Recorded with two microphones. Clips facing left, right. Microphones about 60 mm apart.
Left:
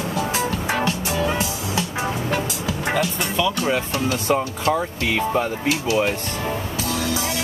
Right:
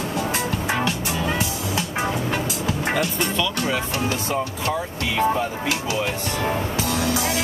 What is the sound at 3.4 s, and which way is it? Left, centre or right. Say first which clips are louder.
Speech: left 5 dB; left.